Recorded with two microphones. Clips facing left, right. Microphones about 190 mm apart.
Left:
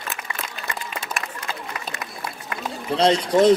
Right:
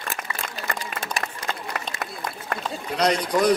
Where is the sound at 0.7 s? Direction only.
50° right (ahead or behind).